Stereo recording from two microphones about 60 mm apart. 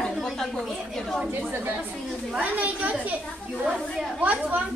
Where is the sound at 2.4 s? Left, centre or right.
Right.